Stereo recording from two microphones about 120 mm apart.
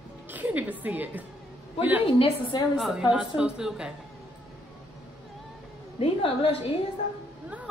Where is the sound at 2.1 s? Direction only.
50° left (ahead or behind).